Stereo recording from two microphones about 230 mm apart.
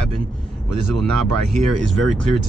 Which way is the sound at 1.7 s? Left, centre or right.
Right.